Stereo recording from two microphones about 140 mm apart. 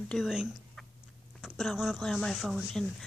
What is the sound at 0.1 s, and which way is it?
Speech, centre (ahead or behind).